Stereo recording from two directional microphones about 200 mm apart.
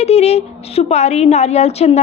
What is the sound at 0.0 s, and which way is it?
A woman's voice, 30° left (ahead or behind).